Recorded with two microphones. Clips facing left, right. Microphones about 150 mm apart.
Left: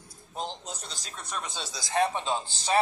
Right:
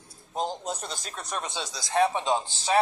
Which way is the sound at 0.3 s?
45° right (ahead or behind).